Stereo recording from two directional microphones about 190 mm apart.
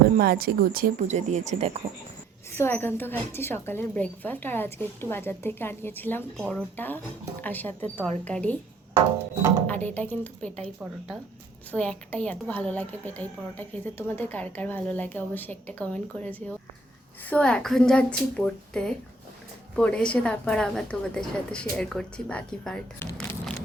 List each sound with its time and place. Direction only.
0.2 s speech: 50° right (ahead or behind); by 1.8 s 35° right (ahead or behind)
2.5 s a woman's voice: 10° left (ahead or behind)
9.6 s a woman's voice: 10° left (ahead or behind)
11.7 s a woman's voice: 5° left (ahead or behind)